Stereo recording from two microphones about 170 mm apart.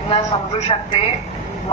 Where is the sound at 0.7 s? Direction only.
30° left (ahead or behind).